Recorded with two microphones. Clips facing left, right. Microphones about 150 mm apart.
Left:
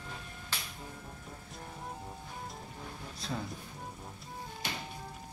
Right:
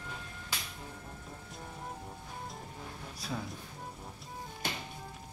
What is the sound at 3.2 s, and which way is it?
Music, 10° right (ahead or behind).